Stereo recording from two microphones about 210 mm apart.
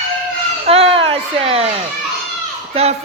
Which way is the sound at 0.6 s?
30° right (ahead or behind).